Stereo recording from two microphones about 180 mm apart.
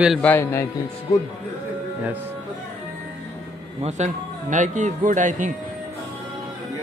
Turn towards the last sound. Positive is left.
turn(degrees=-45)  # may be behind; listen again after turning